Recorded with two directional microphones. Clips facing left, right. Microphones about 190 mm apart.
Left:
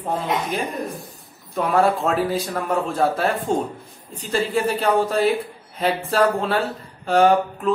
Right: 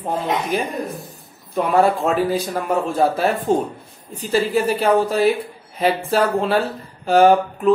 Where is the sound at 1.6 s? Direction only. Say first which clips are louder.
Right 2 dB; centre (ahead or behind).